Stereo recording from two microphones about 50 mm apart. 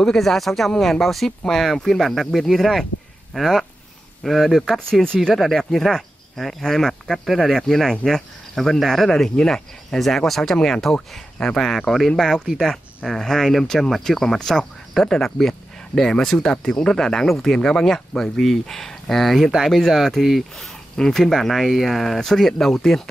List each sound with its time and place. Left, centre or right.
0.0 s speech: centre
5.0 s speech: centre
5.3 s speech: centre